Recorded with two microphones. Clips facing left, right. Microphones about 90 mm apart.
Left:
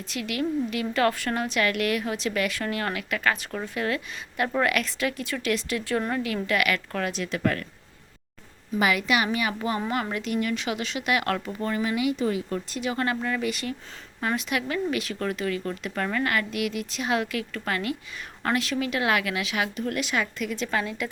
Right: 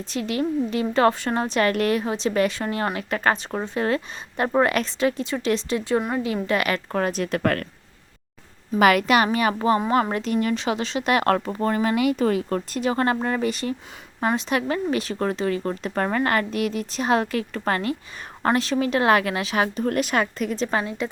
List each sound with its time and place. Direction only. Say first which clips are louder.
0.1 s a woman's voice: right 3 dB; 30° right (ahead or behind)
6.0 s a woman's voice: right 2 dB; 15° right (ahead or behind)
6.2 s a woman's voice: right 2 dB; 25° right (ahead or behind); by 7.6 s 50° right (ahead or behind)
8.8 s a woman's voice: right 6 dB; 55° right (ahead or behind)
12.8 s a woman's voice: right 5 dB; 35° right (ahead or behind)